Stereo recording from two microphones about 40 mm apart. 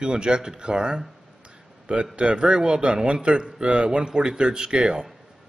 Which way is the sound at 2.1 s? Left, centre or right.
Right.